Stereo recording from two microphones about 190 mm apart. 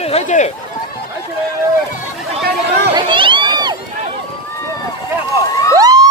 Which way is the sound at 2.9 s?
25° right (ahead or behind).